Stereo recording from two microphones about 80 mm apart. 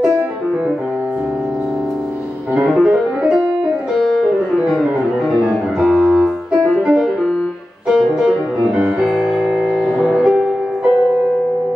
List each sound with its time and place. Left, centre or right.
2.7 s music: centre
4.3 s music: centre
6.5 s music: centre
8.7 s music: centre